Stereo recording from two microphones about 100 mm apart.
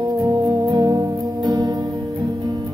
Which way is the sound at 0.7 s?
40° right (ahead or behind).